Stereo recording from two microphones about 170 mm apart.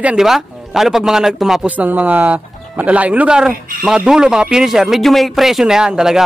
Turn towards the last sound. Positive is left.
turn(degrees=-5)  # may be behind; listen again after turning